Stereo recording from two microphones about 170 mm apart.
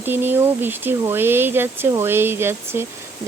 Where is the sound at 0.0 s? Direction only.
10° right (ahead or behind).